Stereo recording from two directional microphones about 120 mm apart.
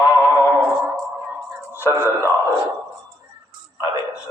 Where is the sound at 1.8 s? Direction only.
20° left (ahead or behind).